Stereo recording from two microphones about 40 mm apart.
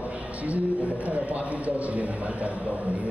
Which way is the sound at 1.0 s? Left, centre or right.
Right.